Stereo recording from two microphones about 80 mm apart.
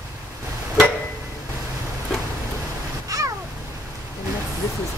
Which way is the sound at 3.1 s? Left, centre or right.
Right.